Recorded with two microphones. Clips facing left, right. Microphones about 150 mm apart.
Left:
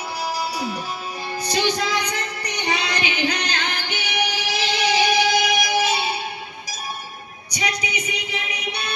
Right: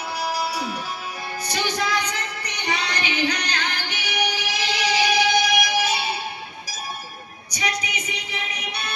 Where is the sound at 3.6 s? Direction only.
25° left (ahead or behind).